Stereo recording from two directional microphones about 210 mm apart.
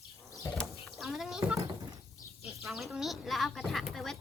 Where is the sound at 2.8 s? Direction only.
Centre (ahead or behind).